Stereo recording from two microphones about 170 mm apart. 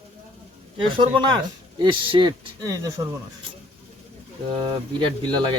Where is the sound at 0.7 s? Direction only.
30° right (ahead or behind).